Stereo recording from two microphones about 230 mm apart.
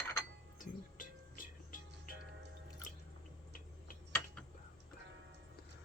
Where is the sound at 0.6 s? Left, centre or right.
Left.